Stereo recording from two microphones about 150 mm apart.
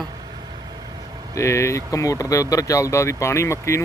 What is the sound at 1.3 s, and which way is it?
Speech, 20° left (ahead or behind).